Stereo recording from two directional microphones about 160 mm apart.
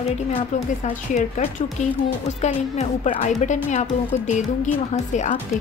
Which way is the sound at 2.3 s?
45° left (ahead or behind).